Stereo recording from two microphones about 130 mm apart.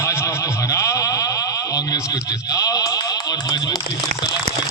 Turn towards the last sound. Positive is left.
turn(degrees=30)  # may be behind; listen again after turning